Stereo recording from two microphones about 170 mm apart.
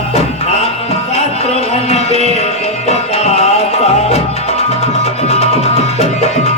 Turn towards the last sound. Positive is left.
turn(degrees=40)  # may be behind; listen again after turning